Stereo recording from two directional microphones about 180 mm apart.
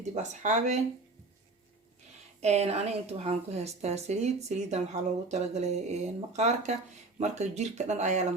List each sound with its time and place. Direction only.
0.1 s a woman's voice: 40° right (ahead or behind)
2.4 s a woman's voice: 35° right (ahead or behind)